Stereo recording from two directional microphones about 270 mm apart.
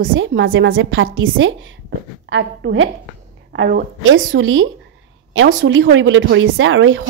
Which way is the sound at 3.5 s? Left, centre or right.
Right.